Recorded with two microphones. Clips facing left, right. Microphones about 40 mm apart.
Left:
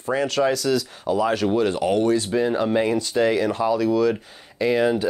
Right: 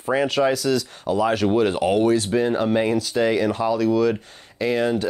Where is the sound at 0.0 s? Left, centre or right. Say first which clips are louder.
Right 1 dB; centre.